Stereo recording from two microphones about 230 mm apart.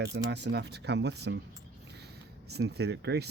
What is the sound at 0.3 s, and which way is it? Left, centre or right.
Speech, right.